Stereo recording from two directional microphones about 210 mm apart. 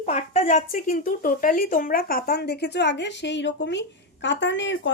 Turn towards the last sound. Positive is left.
turn(degrees=60)  # may be behind; listen again after turning